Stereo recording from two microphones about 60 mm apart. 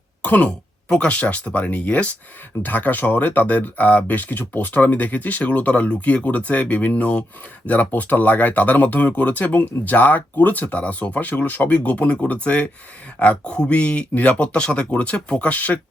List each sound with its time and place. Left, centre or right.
0.2 s speech: left